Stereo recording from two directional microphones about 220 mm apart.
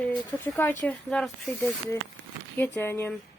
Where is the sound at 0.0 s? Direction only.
15° left (ahead or behind).